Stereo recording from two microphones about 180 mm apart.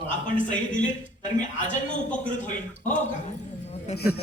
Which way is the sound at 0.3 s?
45° left (ahead or behind).